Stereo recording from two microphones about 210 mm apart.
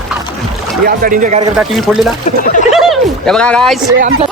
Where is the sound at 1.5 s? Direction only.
Centre (ahead or behind).